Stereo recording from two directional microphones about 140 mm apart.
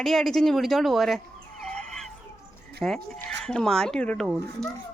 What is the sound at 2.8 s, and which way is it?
A woman's voice, 5° left (ahead or behind).